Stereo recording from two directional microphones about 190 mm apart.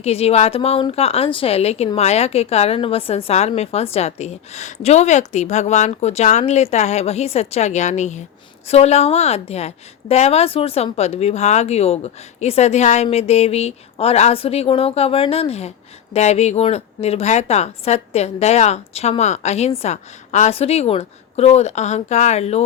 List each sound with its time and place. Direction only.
0.0 s a woman's voice: 30° left (ahead or behind)